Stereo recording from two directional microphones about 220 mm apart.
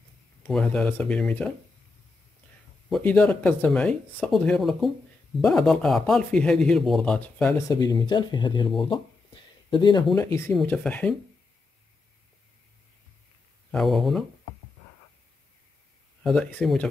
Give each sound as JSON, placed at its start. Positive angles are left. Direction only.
{"t": 0.5, "sound": "speech", "side_deg": 5}
{"t": 2.9, "sound": "speech", "side_deg": 5}
{"t": 7.5, "sound": "speech", "side_deg": 15}
{"t": 13.7, "sound": "speech", "side_deg": 0}
{"t": 16.2, "sound": "speech", "side_deg": 0}